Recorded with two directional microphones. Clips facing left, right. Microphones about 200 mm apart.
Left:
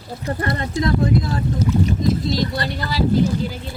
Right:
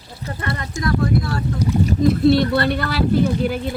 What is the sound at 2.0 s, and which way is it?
Speech, 60° right (ahead or behind).